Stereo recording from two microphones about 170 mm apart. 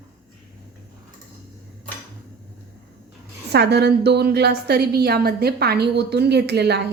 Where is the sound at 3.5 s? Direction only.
75° right (ahead or behind).